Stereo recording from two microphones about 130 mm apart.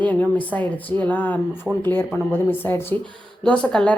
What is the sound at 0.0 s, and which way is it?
A woman's voice, 10° left (ahead or behind).